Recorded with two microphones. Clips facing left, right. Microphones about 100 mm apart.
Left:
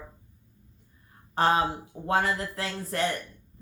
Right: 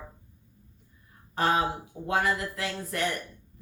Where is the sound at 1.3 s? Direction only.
35° left (ahead or behind).